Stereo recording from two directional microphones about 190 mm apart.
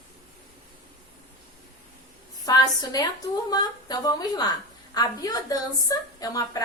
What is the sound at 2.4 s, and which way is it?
A woman's voice, 20° left (ahead or behind).